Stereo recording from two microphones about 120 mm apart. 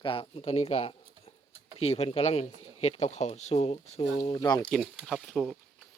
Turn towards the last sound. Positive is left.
turn(degrees=0)  # may be behind; listen again after turning